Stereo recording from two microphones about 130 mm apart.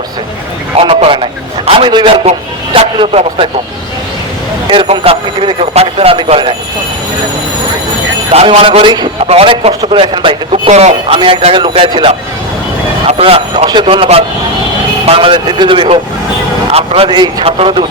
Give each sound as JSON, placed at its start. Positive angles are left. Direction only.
{"t": 0.8, "sound": "a man's voice", "side_deg": -45}
{"t": 2.7, "sound": "speech", "side_deg": -50}
{"t": 4.7, "sound": "speech", "side_deg": -45}
{"t": 8.3, "sound": "a man's voice", "side_deg": -55}
{"t": 9.2, "sound": "speech", "side_deg": -50}
{"t": 10.7, "sound": "a man's voice", "side_deg": -55}
{"t": 11.2, "sound": "a man's voice", "side_deg": -45}